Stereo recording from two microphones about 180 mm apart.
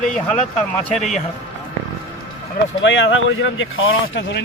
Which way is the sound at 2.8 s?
90° left.